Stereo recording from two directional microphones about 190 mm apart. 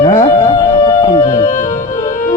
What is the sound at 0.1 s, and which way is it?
Music, 25° left (ahead or behind).